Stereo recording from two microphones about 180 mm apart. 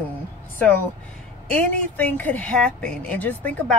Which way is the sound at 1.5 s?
10° left (ahead or behind).